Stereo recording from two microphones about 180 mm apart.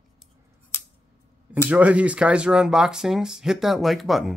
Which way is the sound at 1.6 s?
5° right (ahead or behind).